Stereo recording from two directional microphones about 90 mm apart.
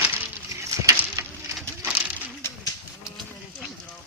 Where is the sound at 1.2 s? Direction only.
35° right (ahead or behind).